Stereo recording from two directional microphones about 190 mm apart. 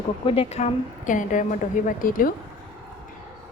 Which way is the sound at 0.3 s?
30° left (ahead or behind).